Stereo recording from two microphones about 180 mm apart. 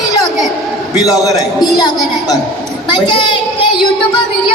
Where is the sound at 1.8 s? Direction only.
20° left (ahead or behind).